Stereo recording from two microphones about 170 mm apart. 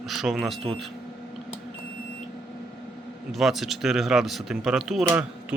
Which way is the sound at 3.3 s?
Centre (ahead or behind).